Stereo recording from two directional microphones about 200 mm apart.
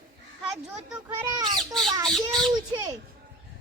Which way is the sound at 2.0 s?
Centre (ahead or behind).